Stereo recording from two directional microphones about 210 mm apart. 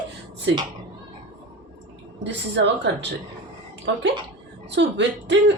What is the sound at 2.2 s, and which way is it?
Speech, 55° right (ahead or behind).